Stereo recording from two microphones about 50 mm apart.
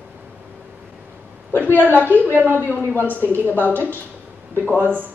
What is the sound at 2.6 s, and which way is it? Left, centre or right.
A woman's voice, left.